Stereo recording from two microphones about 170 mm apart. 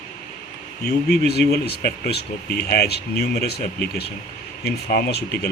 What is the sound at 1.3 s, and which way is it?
Speech, 70° left (ahead or behind).